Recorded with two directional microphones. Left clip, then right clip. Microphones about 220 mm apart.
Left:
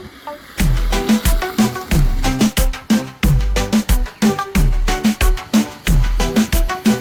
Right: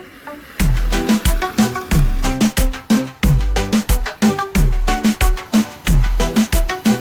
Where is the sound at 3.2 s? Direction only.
Centre (ahead or behind).